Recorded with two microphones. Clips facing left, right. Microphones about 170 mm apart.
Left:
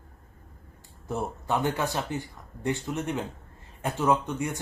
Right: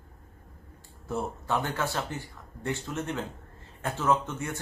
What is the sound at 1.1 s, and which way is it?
Speech, 15° left (ahead or behind).